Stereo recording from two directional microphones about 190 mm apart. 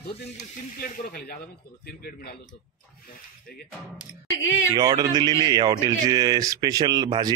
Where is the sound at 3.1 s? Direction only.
50° left (ahead or behind).